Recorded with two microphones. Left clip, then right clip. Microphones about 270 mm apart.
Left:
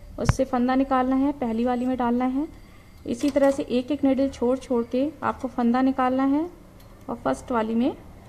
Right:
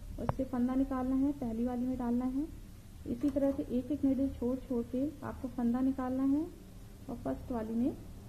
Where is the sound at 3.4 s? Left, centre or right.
Left.